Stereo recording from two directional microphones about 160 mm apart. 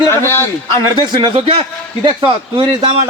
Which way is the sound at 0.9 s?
30° right (ahead or behind).